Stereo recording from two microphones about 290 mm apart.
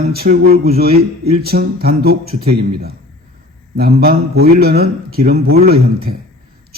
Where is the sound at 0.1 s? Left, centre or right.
Right.